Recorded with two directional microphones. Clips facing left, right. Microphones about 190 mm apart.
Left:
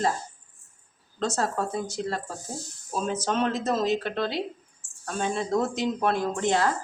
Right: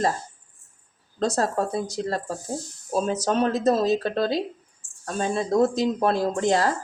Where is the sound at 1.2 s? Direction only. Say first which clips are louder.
Right 4 dB; 40° right (ahead or behind).